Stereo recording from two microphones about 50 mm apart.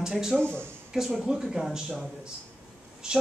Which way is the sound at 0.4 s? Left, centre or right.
Left.